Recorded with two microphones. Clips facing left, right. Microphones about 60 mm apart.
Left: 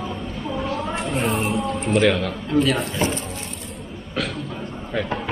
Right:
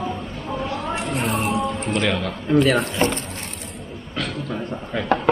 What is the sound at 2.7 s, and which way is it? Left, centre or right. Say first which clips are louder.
Speech: right 3 dB; right.